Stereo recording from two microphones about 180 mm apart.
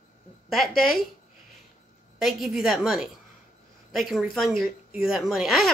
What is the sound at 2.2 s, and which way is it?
Speech, centre (ahead or behind).